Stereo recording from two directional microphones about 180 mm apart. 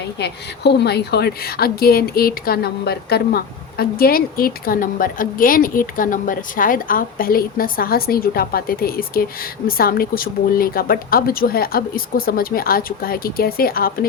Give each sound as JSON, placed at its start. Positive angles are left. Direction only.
{"t": 0.2, "sound": "a woman's voice", "side_deg": 70}